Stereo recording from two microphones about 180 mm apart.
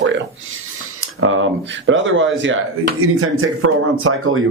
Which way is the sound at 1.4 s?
90° right.